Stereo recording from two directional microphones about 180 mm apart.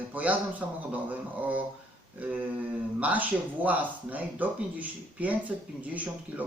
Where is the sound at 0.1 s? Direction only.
10° right (ahead or behind).